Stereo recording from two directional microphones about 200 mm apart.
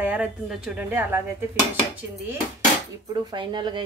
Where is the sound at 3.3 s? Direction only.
20° right (ahead or behind).